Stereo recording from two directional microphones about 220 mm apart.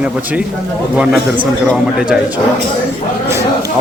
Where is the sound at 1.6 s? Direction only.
5° right (ahead or behind).